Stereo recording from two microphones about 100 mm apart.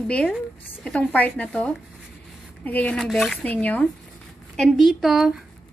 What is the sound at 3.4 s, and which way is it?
Speech, 15° left (ahead or behind).